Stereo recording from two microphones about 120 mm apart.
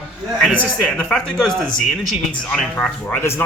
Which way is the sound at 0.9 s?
10° left (ahead or behind).